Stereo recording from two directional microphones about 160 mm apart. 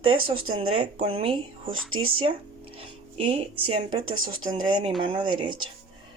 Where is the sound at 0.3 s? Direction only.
35° right (ahead or behind).